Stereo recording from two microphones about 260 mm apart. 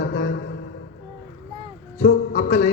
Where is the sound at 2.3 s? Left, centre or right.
Left.